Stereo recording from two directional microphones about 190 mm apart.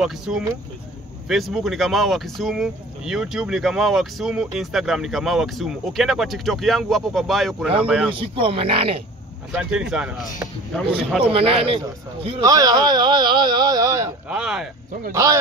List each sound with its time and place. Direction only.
0.0 s speech: 5° right (ahead or behind)
8.1 s speech: 25° right (ahead or behind)
9.5 s speech: 5° right (ahead or behind)
11.3 s speech: 30° right (ahead or behind)
14.3 s speech: 5° right (ahead or behind)
14.9 s speech: 45° right (ahead or behind)